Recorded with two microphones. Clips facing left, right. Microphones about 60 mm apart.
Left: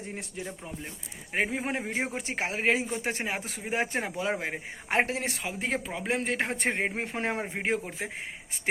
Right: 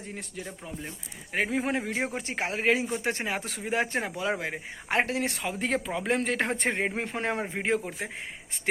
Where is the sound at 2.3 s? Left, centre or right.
Left.